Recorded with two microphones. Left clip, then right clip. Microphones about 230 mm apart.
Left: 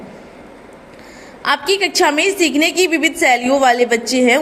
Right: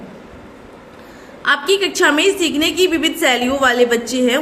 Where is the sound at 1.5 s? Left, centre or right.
Left.